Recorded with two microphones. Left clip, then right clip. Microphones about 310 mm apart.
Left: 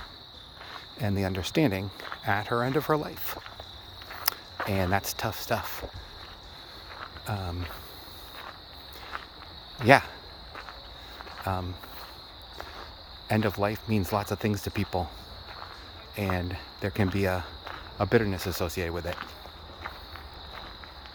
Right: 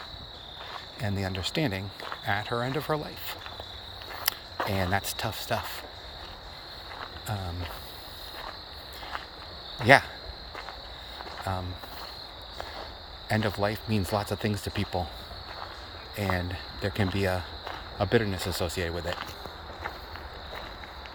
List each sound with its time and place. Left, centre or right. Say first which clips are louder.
1.0 s speech: left 2 dB; left
4.3 s cricket: even; centre
4.7 s speech: left 2 dB; centre
7.3 s speech: left 2 dB; centre
9.8 s speech: even; centre
11.5 s speech: left 2 dB; centre
13.2 s speech: left 1 dB; centre
16.1 s speech: right 1 dB; centre